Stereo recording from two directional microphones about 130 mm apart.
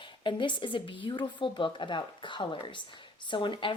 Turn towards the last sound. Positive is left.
turn(degrees=40)  # may be behind; listen again after turning